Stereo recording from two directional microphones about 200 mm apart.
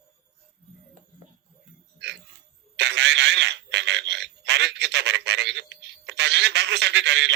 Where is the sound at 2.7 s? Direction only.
60° right (ahead or behind).